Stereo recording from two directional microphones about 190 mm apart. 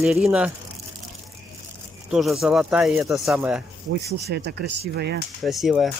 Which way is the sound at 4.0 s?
60° right (ahead or behind).